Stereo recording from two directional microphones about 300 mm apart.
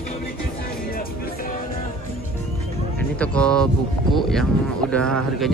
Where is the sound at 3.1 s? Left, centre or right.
Centre.